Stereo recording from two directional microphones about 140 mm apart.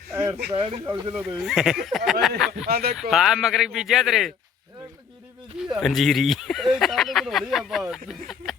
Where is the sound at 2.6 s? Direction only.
90° right.